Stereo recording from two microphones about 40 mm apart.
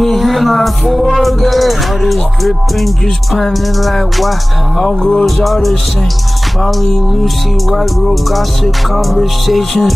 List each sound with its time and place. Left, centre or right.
0.0 s music: centre
7.7 s music: centre